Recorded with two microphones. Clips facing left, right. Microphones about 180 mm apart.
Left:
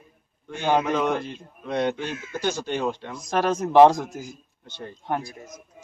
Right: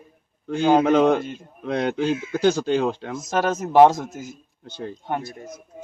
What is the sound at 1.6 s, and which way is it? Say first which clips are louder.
Speech: right 3 dB; 90° right.